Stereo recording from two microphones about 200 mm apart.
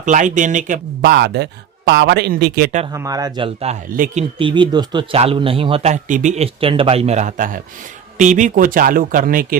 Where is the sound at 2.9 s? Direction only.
15° right (ahead or behind); by 4.2 s 40° right (ahead or behind).